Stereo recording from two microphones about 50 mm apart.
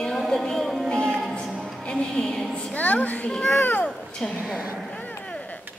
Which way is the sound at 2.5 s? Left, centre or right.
Left.